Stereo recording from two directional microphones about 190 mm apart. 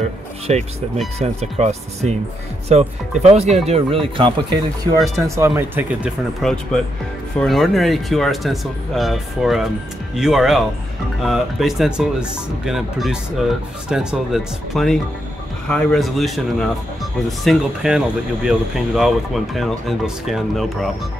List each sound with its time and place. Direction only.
0.5 s speech: 35° right (ahead or behind)
5.5 s speech: 10° right (ahead or behind)